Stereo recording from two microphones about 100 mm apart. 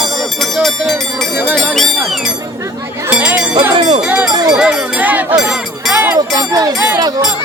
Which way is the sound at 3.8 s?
65° right (ahead or behind).